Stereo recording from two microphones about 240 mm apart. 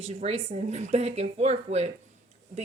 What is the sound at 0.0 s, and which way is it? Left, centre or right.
Speech, right.